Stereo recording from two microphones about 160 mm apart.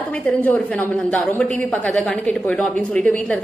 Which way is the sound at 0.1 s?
10° left (ahead or behind).